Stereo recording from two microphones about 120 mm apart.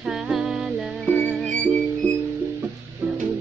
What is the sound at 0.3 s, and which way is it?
Music, 5° right (ahead or behind).